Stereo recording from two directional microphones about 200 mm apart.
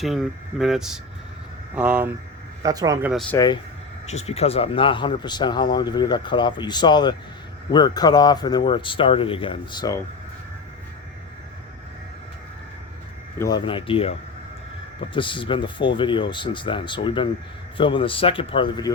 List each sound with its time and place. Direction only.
0.0 s speech: centre (ahead or behind)
2.6 s speech: 15° right (ahead or behind)
3.1 s speech: centre (ahead or behind)
3.3 s speech: 20° left (ahead or behind)
4.0 s speech: 35° left (ahead or behind)
13.4 s speech: 20° left (ahead or behind)
15.1 s speech: 25° left (ahead or behind)